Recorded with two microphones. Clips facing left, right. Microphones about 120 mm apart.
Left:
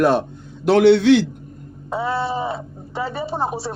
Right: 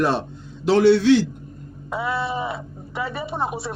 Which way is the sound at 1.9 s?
35° left (ahead or behind).